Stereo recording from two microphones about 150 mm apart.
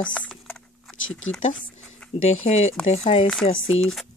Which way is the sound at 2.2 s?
45° left (ahead or behind).